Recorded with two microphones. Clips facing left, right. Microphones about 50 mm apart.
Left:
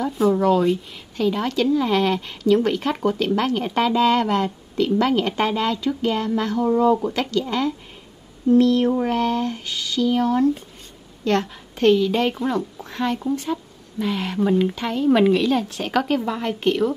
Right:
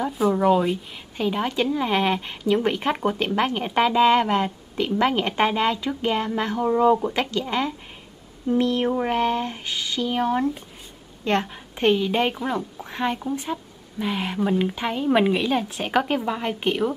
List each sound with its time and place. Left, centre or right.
0.2 s a woman's voice: centre
14.8 s a woman's voice: centre